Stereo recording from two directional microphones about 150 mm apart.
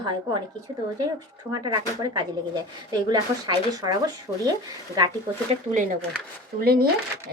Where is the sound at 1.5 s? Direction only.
25° right (ahead or behind).